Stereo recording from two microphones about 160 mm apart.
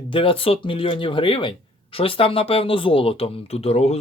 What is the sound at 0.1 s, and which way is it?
Speech, 35° left (ahead or behind).